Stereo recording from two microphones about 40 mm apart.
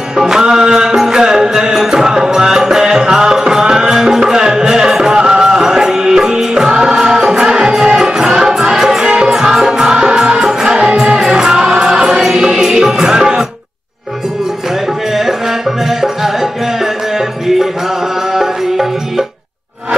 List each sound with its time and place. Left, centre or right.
0.1 s music: centre
18.3 s music: centre